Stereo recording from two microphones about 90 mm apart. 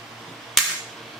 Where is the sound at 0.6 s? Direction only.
Centre (ahead or behind).